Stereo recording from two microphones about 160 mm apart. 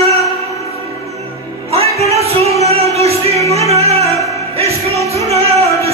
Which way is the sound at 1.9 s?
40° right (ahead or behind).